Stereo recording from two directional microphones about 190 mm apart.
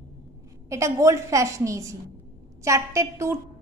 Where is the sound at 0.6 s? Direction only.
15° right (ahead or behind).